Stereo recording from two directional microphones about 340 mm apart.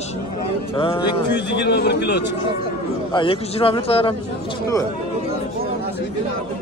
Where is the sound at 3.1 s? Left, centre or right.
Centre.